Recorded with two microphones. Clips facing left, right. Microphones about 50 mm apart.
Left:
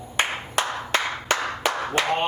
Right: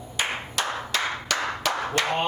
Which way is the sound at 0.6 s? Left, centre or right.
Left.